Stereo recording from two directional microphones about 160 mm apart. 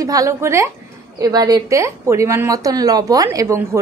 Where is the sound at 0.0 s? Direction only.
20° right (ahead or behind).